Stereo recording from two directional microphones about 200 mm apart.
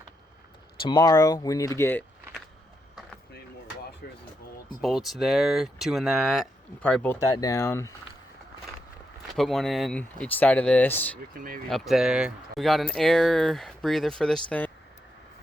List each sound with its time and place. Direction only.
0.9 s speech: 20° left (ahead or behind)
4.0 s speech: 50° left (ahead or behind)
4.8 s speech: centre (ahead or behind)
9.2 s speech: centre (ahead or behind)